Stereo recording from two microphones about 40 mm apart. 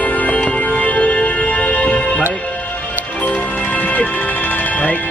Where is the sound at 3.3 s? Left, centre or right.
Left.